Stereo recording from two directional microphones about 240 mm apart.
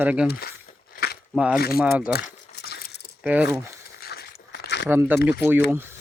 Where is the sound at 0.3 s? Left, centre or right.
Left.